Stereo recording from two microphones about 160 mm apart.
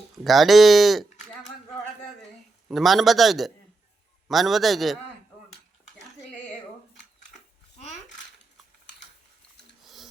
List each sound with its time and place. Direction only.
0.3 s a man's voice: centre (ahead or behind)
2.6 s a man's voice: centre (ahead or behind)
9.8 s a sound: centre (ahead or behind)